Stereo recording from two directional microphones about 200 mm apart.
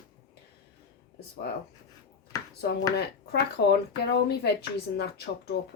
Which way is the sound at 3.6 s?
60° left (ahead or behind).